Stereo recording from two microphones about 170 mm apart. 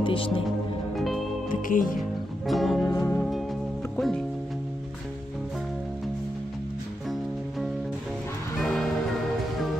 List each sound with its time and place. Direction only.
0.0 s speech: 30° left (ahead or behind)
0.9 s music: centre (ahead or behind)
1.5 s speech: 55° left (ahead or behind)
2.0 s music: centre (ahead or behind)
2.9 s music: 15° left (ahead or behind)
3.2 s music: centre (ahead or behind)
3.9 s speech: centre (ahead or behind)
8.5 s music: centre (ahead or behind)